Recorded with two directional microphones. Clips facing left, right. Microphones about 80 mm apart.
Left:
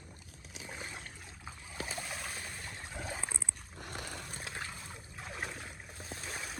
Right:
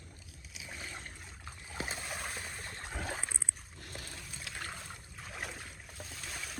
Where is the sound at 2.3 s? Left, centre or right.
Centre.